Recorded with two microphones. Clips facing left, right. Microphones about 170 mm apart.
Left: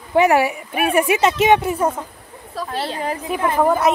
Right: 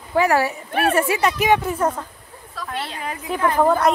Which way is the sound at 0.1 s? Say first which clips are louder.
Left 3 dB; 20° left (ahead or behind).